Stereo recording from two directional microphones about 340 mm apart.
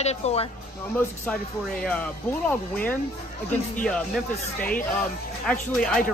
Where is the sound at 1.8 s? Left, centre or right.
Centre.